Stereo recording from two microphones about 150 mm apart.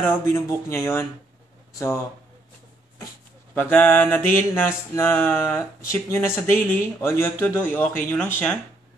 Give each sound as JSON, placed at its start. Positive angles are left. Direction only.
{"t": 0.0, "sound": "a man's voice", "side_deg": 15}
{"t": 3.5, "sound": "a man's voice", "side_deg": 10}